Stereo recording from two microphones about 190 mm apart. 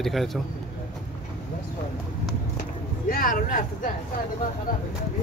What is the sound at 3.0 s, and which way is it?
Speech, 45° left (ahead or behind).